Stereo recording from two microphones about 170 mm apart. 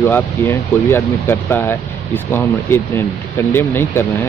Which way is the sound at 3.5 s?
15° left (ahead or behind).